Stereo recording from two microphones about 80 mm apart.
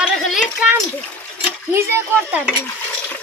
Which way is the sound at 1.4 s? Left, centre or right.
Right.